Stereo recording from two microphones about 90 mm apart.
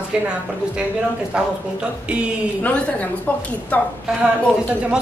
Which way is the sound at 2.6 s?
15° left (ahead or behind).